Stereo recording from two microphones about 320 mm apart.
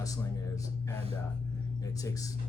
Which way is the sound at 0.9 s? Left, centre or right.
Centre.